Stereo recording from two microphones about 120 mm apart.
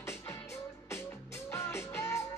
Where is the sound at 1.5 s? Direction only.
20° left (ahead or behind).